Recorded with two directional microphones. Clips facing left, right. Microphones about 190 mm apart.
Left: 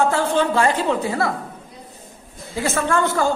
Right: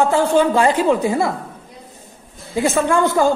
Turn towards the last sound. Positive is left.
turn(degrees=-15)  # may be behind; listen again after turning